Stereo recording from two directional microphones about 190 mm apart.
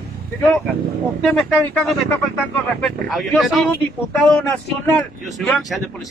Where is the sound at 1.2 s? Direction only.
5° left (ahead or behind).